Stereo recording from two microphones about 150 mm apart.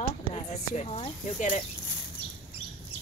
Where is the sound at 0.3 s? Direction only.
45° left (ahead or behind).